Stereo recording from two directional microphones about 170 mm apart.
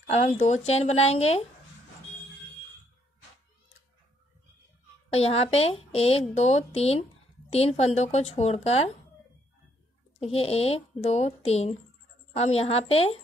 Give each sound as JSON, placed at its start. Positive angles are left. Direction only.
{"t": 0.1, "sound": "a woman's voice", "side_deg": 40}
{"t": 5.1, "sound": "a woman's voice", "side_deg": 35}
{"t": 10.2, "sound": "a woman's voice", "side_deg": 35}